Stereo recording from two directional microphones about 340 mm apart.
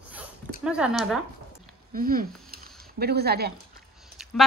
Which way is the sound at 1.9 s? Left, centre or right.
Right.